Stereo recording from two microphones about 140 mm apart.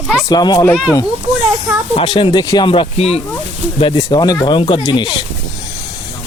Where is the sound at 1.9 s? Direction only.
40° left (ahead or behind).